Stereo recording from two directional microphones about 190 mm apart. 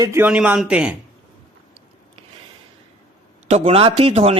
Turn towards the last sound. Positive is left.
turn(degrees=-35)  # may be behind; listen again after turning